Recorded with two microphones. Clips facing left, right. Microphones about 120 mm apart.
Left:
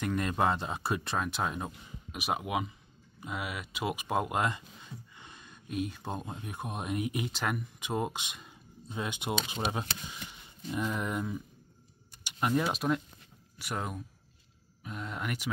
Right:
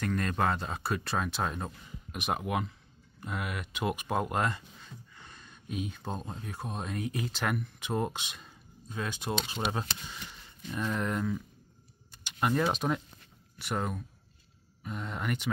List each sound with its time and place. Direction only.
0.0 s speech: 10° left (ahead or behind)
1.3 s speech: 5° left (ahead or behind)
7.4 s speech: 5° left (ahead or behind)
12.3 s a sound: 5° left (ahead or behind)
12.7 s speech: centre (ahead or behind)